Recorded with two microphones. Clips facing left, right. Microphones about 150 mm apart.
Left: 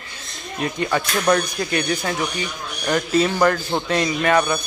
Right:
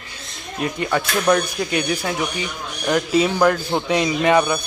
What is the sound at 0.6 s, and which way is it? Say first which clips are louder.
Speech: even; 5° right (ahead or behind).